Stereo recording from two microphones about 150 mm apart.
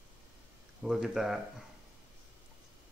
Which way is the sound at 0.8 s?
5° right (ahead or behind).